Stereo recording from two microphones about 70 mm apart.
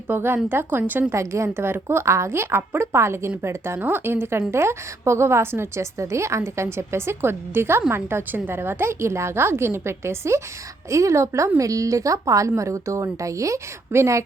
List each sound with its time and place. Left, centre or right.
0.1 s a woman's voice: right
1.1 s a woman's voice: right